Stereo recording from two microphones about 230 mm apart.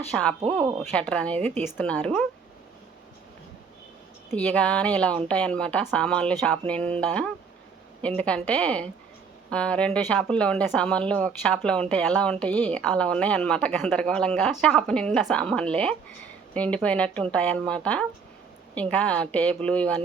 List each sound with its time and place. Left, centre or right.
0.1 s speech: centre
4.4 s speech: centre